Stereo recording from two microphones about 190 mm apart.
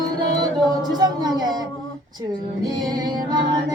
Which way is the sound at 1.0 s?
20° right (ahead or behind).